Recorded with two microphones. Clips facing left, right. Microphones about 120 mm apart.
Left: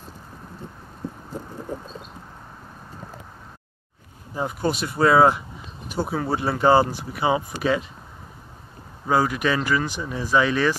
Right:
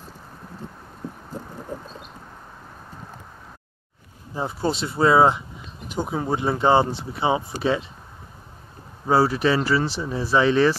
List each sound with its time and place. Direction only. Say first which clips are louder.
4.4 s speech: even; 30° right (ahead or behind)
9.0 s speech: right 2 dB; 30° right (ahead or behind)